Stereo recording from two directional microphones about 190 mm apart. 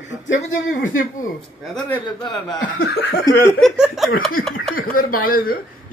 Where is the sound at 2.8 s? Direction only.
55° left (ahead or behind).